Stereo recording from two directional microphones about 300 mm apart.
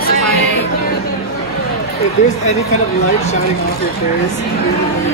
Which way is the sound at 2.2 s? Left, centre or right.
Left.